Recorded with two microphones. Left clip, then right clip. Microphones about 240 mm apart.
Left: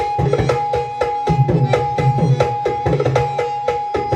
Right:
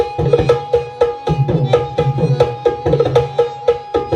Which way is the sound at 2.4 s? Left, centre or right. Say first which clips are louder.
Right 5 dB; right.